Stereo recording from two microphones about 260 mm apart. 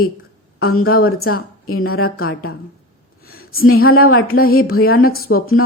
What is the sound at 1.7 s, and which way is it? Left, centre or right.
Speech, left.